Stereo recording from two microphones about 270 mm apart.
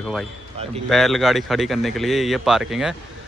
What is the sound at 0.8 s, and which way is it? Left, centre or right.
Speech, centre.